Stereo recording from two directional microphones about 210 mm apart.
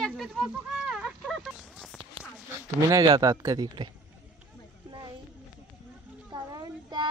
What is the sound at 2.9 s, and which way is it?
A woman's voice, 20° right (ahead or behind).